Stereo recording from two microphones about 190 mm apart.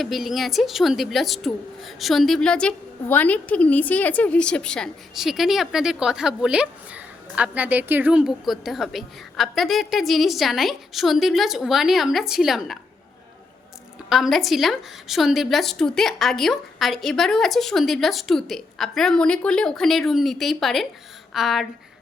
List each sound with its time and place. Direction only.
0.0 s a woman's voice: centre (ahead or behind)
14.1 s a woman's voice: centre (ahead or behind)